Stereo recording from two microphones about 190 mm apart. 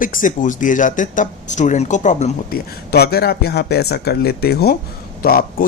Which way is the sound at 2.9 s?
55° left (ahead or behind).